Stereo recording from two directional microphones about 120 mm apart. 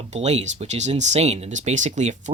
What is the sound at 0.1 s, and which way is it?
Speech, 65° right (ahead or behind).